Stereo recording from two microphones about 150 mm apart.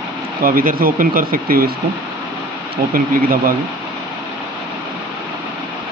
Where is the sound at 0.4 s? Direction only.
70° right (ahead or behind).